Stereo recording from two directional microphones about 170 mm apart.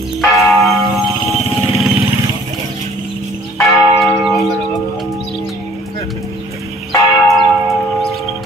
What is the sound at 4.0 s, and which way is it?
Church bell, centre (ahead or behind).